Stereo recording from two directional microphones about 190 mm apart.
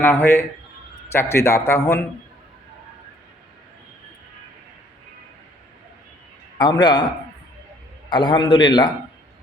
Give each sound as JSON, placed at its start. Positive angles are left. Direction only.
{"t": 0.0, "sound": "a man's voice", "side_deg": 10}
{"t": 6.6, "sound": "a man's voice", "side_deg": 25}
{"t": 8.1, "sound": "a man's voice", "side_deg": 25}